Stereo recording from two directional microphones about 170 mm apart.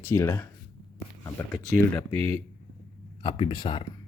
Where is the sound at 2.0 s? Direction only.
15° left (ahead or behind).